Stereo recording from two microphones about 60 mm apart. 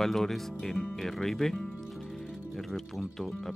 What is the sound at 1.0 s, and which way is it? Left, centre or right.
Music, centre.